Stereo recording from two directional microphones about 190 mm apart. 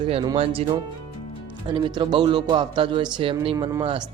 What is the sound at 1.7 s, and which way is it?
Speech, 25° right (ahead or behind).